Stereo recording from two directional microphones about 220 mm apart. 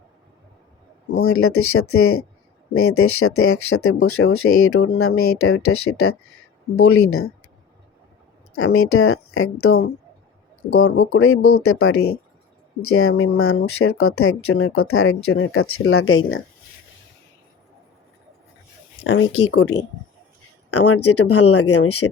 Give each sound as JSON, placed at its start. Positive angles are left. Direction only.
{"t": 1.2, "sound": "speech", "side_deg": 75}
{"t": 8.5, "sound": "speech", "side_deg": 70}
{"t": 19.0, "sound": "speech", "side_deg": 60}
{"t": 20.7, "sound": "speech", "side_deg": 90}